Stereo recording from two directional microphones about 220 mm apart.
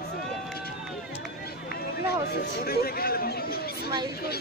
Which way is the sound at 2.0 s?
45° left (ahead or behind).